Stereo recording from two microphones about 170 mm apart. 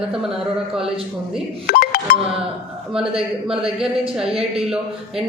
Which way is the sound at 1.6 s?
60° left (ahead or behind).